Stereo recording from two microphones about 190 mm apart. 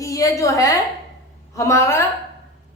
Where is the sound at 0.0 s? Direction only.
15° left (ahead or behind).